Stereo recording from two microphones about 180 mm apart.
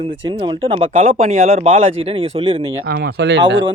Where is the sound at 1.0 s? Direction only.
45° right (ahead or behind).